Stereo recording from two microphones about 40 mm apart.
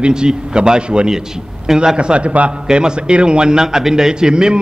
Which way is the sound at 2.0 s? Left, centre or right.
Right.